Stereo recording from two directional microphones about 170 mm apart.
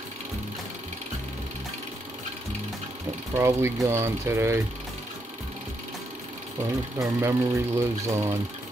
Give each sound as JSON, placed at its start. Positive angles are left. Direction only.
{"t": 3.3, "sound": "speech", "side_deg": -15}
{"t": 7.0, "sound": "speech", "side_deg": -15}